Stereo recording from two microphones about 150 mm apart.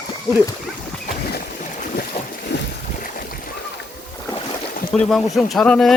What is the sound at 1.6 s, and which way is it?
Boat, 60° left (ahead or behind).